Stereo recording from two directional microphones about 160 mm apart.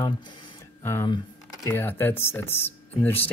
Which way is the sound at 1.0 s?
25° left (ahead or behind).